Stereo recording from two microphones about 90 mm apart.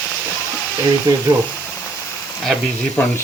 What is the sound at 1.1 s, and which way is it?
Speech, 50° right (ahead or behind).